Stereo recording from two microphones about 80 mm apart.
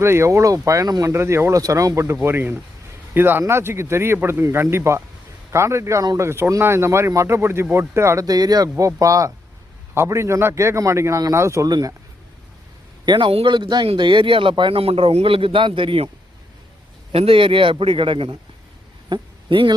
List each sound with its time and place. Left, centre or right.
0.0 s speech: right
1.1 s speech: right
2.2 s speech: right
8.3 s speech: right
9.9 s speech: right
11.7 s speech: right
13.1 s speech: right
17.3 s speech: right